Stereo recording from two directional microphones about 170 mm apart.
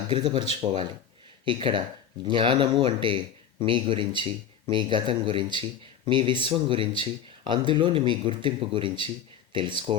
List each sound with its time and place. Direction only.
0.1 s speech: 30° right (ahead or behind)